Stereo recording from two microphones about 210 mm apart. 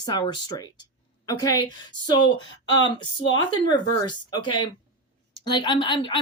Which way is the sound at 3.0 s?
20° left (ahead or behind).